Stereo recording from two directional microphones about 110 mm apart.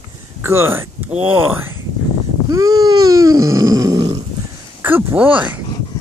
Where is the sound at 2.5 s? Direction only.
35° right (ahead or behind).